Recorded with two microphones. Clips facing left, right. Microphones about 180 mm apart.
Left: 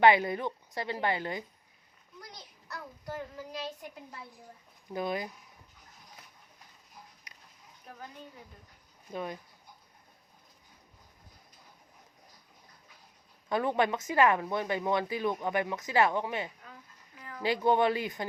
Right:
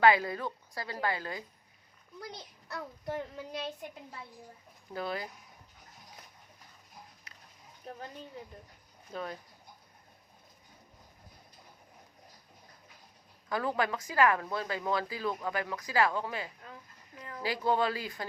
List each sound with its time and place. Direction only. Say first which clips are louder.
0.0 s speech: left 2 dB; 25° left (ahead or behind)
2.3 s a child's voice: even; 30° right (ahead or behind)
4.9 s speech: left 3 dB; 15° left (ahead or behind)
7.3 s a sound: right 1 dB; 15° left (ahead or behind)
9.1 s speech: left 2 dB; 15° left (ahead or behind)
13.5 s speech: left 3 dB; 25° left (ahead or behind)